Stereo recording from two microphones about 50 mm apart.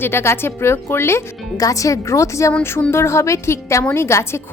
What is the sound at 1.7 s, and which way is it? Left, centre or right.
Speech, left.